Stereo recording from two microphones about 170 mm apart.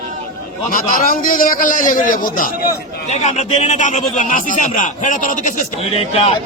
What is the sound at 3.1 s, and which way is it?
A man's voice, 45° left (ahead or behind).